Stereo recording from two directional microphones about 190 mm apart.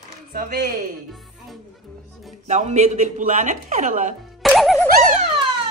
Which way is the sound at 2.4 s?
40° right (ahead or behind).